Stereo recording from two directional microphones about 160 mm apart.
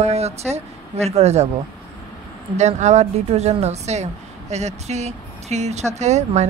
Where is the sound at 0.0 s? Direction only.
40° right (ahead or behind).